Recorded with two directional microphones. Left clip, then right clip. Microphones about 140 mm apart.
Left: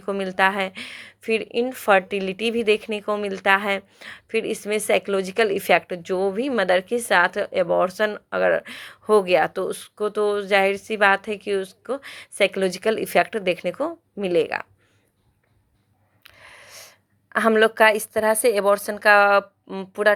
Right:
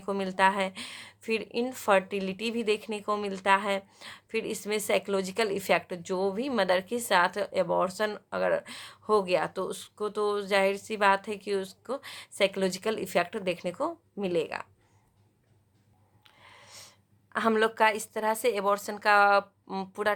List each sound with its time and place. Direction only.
0.0 s a woman's voice: 25° left (ahead or behind)
16.2 s a sound: 35° left (ahead or behind)
17.5 s a woman's voice: 25° left (ahead or behind)
19.6 s speech: 15° left (ahead or behind)